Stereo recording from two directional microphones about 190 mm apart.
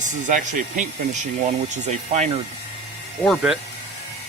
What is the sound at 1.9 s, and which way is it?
Speech, 35° right (ahead or behind).